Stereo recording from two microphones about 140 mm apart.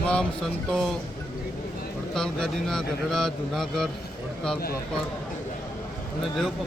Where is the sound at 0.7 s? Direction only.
Centre (ahead or behind).